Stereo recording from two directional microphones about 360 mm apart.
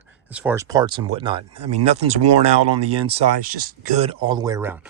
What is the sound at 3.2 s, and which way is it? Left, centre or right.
Speech, right.